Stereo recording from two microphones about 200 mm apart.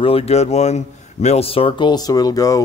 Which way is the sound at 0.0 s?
30° left (ahead or behind).